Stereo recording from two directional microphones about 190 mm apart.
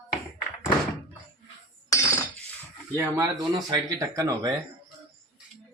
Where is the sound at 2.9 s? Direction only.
15° right (ahead or behind).